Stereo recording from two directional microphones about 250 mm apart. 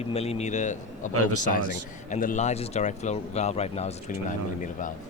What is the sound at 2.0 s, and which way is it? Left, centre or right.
Speech, left.